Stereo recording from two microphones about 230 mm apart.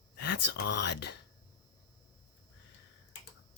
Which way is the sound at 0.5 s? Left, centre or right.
Left.